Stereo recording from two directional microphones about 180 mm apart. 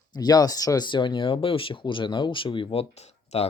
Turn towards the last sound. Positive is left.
turn(degrees=35)  # may be behind; listen again after turning